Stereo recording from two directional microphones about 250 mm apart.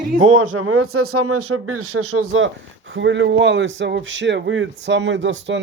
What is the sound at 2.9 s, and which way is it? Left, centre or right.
Speech, right.